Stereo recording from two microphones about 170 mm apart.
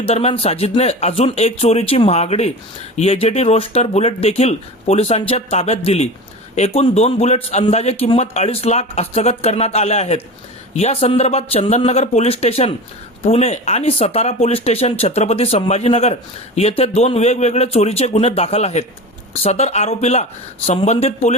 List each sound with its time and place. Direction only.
0.0 s a man's voice: 35° left (ahead or behind)